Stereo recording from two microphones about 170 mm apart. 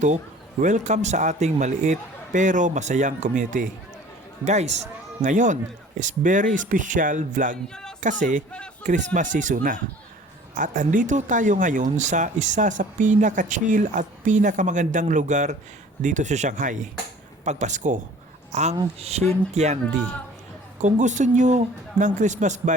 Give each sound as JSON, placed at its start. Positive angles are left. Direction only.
{"t": 0.6, "sound": "speech", "side_deg": -45}
{"t": 7.7, "sound": "music", "side_deg": 5}
{"t": 8.0, "sound": "speech", "side_deg": -50}
{"t": 19.2, "sound": "speech", "side_deg": 10}
{"t": 19.5, "sound": "speech", "side_deg": -45}